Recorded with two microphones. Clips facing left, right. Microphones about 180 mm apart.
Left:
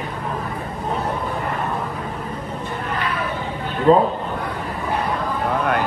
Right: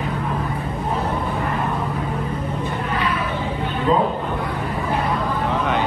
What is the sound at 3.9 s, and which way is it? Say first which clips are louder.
Music: left 5 dB; 40° left (ahead or behind).